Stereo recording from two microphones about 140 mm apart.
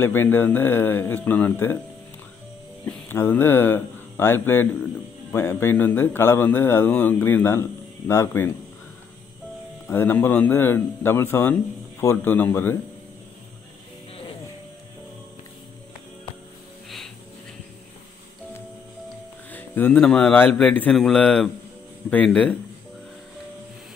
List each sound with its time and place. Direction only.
0.0 s speech: 15° left (ahead or behind)
2.8 s speech: 15° left (ahead or behind)
9.8 s speech: 15° left (ahead or behind)
19.5 s speech: 15° left (ahead or behind)